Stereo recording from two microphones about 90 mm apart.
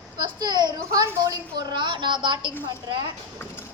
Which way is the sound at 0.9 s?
40° right (ahead or behind).